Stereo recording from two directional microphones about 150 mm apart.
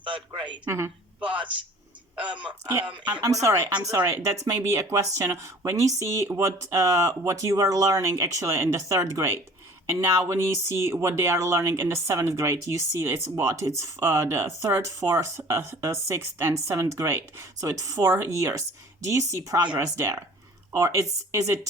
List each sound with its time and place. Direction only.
0.0 s a man's voice: 35° right (ahead or behind)
0.6 s speech: 15° right (ahead or behind)
2.1 s speech: 10° right (ahead or behind)
21.3 s speech: 20° right (ahead or behind)